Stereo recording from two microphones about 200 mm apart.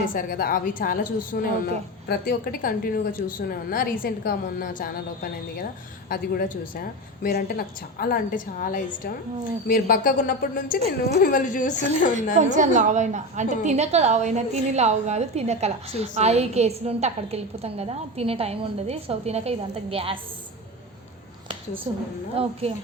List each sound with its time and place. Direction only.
0.1 s a woman's voice: 45° left (ahead or behind)
6.1 s a woman's voice: 45° left (ahead or behind)
10.8 s a woman's voice: 30° right (ahead or behind)
11.2 s a woman's voice: 40° left (ahead or behind)
12.4 s a woman's voice: 40° right (ahead or behind)
21.9 s a woman's voice: 25° right (ahead or behind)